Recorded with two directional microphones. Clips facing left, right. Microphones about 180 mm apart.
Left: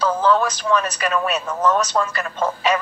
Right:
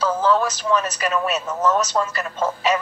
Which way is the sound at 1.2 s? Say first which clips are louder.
Left 1 dB; 25° right (ahead or behind).